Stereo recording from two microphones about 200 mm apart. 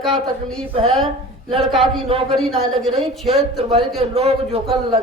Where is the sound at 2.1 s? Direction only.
30° right (ahead or behind).